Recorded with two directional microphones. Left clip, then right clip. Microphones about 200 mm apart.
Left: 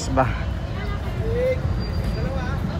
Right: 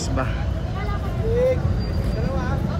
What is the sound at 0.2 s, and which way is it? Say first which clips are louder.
Speech: left 7 dB; 5° right (ahead or behind).